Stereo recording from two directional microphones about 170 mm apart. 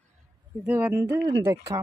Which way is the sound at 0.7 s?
10° right (ahead or behind).